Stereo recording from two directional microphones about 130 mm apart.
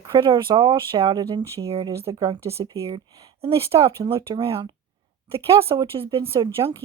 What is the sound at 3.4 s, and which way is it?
Speech, 45° right (ahead or behind).